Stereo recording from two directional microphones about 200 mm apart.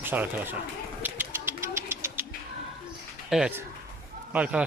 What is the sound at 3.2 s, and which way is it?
Bird, 5° right (ahead or behind).